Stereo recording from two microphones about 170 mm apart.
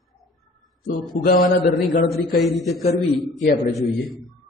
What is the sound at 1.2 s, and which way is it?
Speech, 65° left (ahead or behind).